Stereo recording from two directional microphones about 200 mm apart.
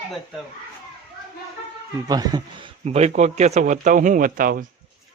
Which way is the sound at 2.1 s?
20° right (ahead or behind).